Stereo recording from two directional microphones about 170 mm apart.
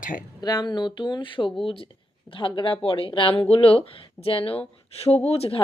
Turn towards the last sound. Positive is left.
turn(degrees=35)  # may be behind; listen again after turning